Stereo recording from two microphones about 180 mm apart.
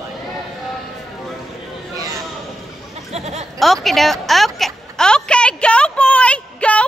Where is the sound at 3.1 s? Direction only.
35° right (ahead or behind).